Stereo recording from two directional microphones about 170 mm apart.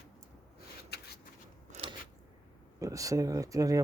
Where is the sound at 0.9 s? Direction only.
70° left (ahead or behind).